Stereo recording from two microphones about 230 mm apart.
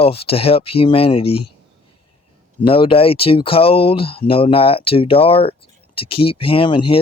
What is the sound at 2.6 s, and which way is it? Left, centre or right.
Speech, left.